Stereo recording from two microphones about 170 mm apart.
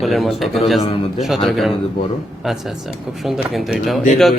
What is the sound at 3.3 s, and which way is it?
Speech, centre (ahead or behind).